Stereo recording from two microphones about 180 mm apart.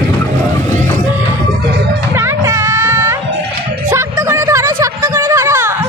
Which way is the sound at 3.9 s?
15° right (ahead or behind).